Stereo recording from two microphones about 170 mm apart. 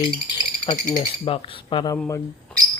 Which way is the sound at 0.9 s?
35° left (ahead or behind).